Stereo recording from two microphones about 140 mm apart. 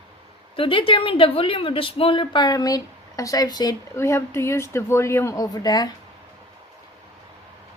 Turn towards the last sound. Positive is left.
turn(degrees=25)  # may be behind; listen again after turning